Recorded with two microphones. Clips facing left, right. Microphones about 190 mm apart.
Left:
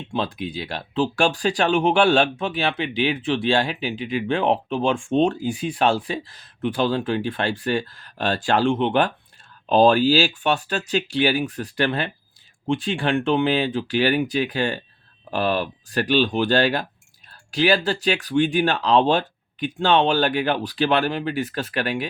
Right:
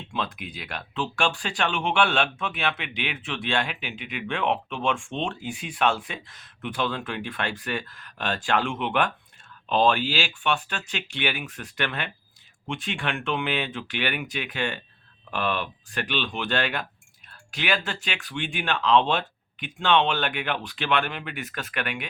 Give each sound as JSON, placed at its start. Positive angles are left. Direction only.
{"t": 0.1, "sound": "speech", "side_deg": 30}